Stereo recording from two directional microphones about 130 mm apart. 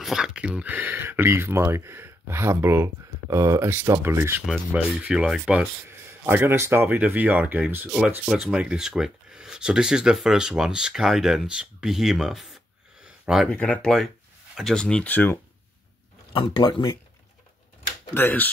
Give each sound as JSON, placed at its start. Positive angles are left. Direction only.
{"t": 0.0, "sound": "speech", "side_deg": -5}
{"t": 4.7, "sound": "speech", "side_deg": -10}
{"t": 5.9, "sound": "speech", "side_deg": -20}
{"t": 13.0, "sound": "a sound", "side_deg": -5}
{"t": 13.5, "sound": "speech", "side_deg": 10}
{"t": 16.3, "sound": "speech", "side_deg": 35}
{"t": 18.1, "sound": "speech", "side_deg": 15}